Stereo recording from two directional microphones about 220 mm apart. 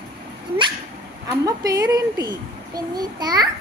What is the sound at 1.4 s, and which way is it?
A child's voice, 15° right (ahead or behind).